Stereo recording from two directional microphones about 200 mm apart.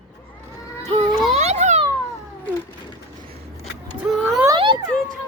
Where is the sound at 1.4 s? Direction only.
35° right (ahead or behind).